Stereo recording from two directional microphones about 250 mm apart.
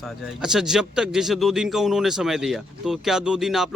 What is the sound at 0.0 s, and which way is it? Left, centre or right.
Speech, centre.